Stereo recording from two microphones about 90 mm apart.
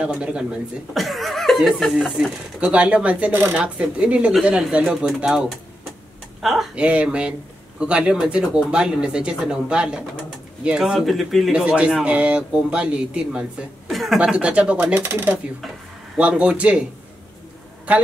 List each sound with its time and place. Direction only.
0.0 s speech: 10° right (ahead or behind)
6.4 s speech: 5° right (ahead or behind)
11.5 s speech: 10° right (ahead or behind)
15.0 s speech: 25° right (ahead or behind)